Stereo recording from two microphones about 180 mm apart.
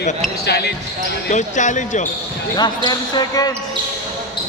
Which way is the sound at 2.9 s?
20° left (ahead or behind).